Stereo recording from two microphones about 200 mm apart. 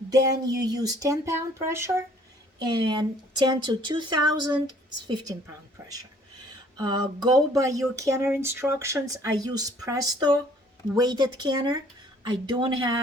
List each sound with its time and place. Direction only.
0.1 s speech: 20° right (ahead or behind)